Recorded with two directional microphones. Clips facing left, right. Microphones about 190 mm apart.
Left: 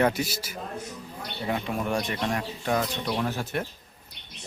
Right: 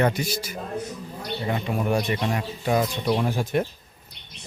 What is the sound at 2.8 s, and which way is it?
Speech, 15° right (ahead or behind).